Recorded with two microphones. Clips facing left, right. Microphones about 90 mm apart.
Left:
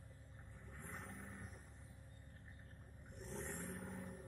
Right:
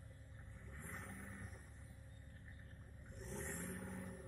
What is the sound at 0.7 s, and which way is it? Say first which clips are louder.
Vehicle: even; 20° left (ahead or behind).